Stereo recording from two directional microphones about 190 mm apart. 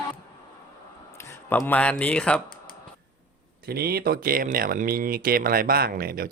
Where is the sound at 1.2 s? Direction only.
10° left (ahead or behind).